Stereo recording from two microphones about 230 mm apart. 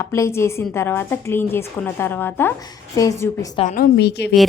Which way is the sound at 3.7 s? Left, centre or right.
Left.